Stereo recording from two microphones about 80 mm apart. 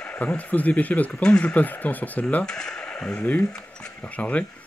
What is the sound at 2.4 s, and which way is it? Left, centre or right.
Speech, centre.